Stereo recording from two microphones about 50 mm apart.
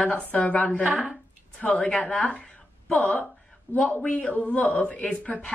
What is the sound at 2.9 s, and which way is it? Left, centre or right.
Speech, left.